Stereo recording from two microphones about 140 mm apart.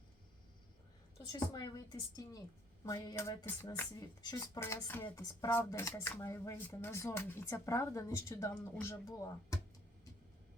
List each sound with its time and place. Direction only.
1.3 s speech: 30° left (ahead or behind)
4.2 s speech: 25° left (ahead or behind)